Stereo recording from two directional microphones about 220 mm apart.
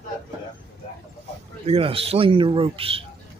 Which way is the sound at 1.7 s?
25° right (ahead or behind).